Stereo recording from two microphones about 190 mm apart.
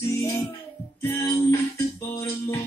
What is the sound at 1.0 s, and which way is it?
Music, 15° left (ahead or behind).